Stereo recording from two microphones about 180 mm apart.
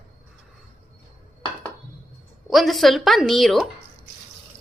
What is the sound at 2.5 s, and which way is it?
A woman's voice, centre (ahead or behind).